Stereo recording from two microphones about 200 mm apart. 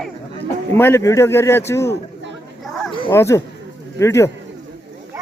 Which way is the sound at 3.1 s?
15° left (ahead or behind).